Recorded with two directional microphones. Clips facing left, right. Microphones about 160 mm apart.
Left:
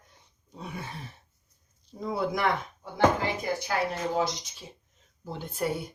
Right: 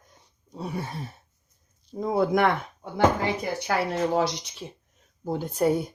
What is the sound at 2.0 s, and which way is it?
Speech, 50° right (ahead or behind).